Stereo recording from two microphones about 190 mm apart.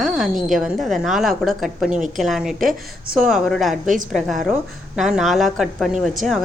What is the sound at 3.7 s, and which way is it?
Speech, 45° right (ahead or behind).